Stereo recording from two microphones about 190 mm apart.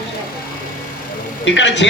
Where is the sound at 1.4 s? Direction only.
75° left (ahead or behind).